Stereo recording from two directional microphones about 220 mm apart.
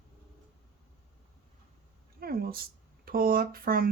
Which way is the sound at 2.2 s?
45° right (ahead or behind).